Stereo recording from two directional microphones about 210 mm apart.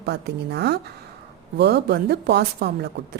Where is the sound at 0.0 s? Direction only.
50° right (ahead or behind).